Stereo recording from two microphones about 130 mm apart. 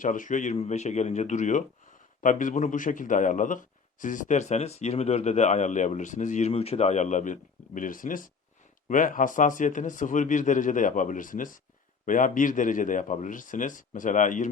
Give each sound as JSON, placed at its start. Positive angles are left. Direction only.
{"t": 0.0, "sound": "speech", "side_deg": 90}
{"t": 0.5, "sound": "a man's voice", "side_deg": 55}
{"t": 2.2, "sound": "a man's voice", "side_deg": 80}
{"t": 6.5, "sound": "a man's voice", "side_deg": 50}